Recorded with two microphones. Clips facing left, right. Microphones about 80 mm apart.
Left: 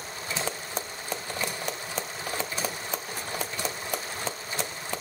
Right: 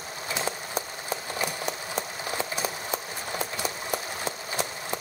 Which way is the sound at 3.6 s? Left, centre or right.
Centre.